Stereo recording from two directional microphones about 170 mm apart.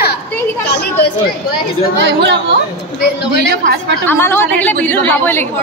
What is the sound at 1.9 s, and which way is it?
Speech, 90° right.